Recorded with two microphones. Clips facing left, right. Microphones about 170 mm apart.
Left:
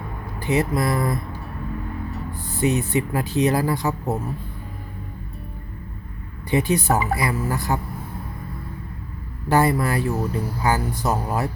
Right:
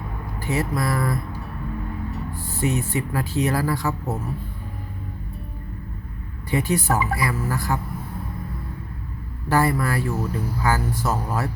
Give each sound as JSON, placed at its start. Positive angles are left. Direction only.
{"t": 0.3, "sound": "speech", "side_deg": 20}
{"t": 2.4, "sound": "speech", "side_deg": 20}
{"t": 6.5, "sound": "speech", "side_deg": 20}
{"t": 9.5, "sound": "speech", "side_deg": 20}